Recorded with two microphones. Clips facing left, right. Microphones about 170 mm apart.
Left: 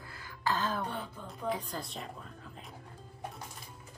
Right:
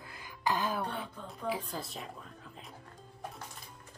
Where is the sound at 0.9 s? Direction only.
10° right (ahead or behind).